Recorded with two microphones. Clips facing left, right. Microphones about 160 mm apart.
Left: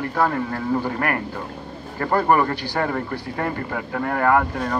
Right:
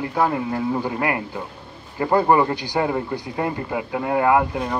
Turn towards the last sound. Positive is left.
turn(degrees=-10)  # may be behind; listen again after turning